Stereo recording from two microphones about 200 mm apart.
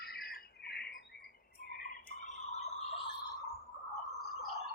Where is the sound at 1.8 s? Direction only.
35° left (ahead or behind).